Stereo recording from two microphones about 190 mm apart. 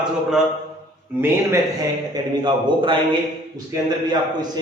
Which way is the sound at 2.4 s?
25° right (ahead or behind).